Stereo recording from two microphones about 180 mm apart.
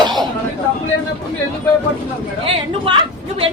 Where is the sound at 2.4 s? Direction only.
30° right (ahead or behind).